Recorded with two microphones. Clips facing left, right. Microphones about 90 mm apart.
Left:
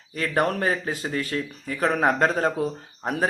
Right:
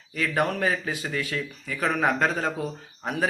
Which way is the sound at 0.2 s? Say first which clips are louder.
Left 1 dB; 40° left (ahead or behind).